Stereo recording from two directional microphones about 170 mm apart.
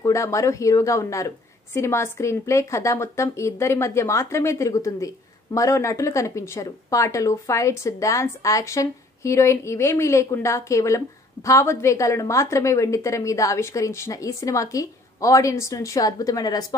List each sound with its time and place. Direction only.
0.0 s a woman's voice: 20° left (ahead or behind)